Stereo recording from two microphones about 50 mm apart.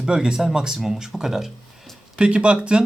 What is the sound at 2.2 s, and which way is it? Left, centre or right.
Speech, right.